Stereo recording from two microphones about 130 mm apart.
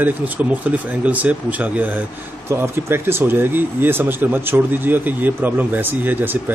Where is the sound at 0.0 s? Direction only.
10° right (ahead or behind).